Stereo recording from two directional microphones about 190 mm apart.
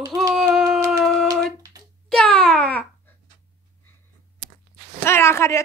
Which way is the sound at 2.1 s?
5° left (ahead or behind).